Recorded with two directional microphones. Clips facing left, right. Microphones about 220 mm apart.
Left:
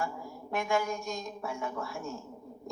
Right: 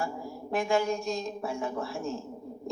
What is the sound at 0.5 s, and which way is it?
Speech, 30° right (ahead or behind).